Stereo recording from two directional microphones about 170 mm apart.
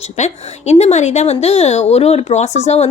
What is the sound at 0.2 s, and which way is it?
A woman's voice, 40° left (ahead or behind).